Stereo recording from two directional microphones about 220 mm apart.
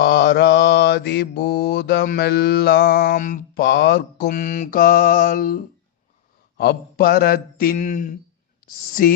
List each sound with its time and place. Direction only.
0.0 s mantra: 50° left (ahead or behind)
8.6 s speech: 40° left (ahead or behind)